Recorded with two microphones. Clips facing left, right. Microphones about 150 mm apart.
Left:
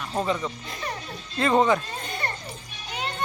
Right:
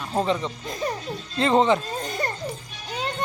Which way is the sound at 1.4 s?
25° right (ahead or behind).